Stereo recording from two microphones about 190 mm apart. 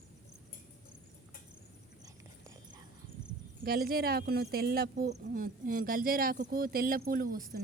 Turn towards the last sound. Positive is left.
turn(degrees=-50)  # may be behind; listen again after turning